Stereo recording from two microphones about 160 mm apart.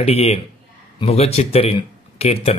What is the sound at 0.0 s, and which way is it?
Mantra, 40° left (ahead or behind).